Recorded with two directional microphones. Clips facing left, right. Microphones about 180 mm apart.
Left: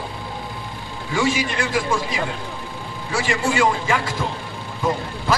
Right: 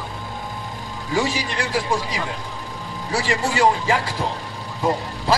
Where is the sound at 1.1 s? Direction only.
35° right (ahead or behind).